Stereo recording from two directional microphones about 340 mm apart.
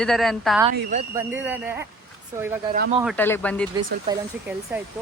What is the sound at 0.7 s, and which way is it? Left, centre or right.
Speech, right.